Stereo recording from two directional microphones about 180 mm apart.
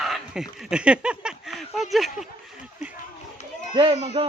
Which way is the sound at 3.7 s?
30° right (ahead or behind).